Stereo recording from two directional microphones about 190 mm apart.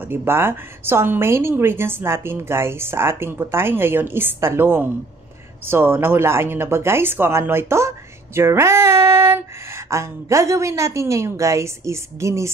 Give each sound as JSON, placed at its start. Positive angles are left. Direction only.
{"t": 0.1, "sound": "a woman's voice", "side_deg": -10}
{"t": 8.4, "sound": "female singing", "side_deg": -15}
{"t": 9.8, "sound": "a woman's voice", "side_deg": -15}